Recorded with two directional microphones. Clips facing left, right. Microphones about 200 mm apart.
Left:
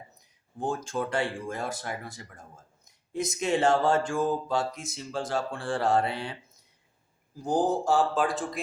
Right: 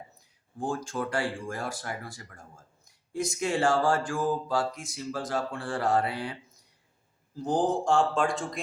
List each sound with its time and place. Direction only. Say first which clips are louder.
0.2 s mantra: left 1 dB; 20° left (ahead or behind)
7.3 s speech: left 1 dB; 10° left (ahead or behind)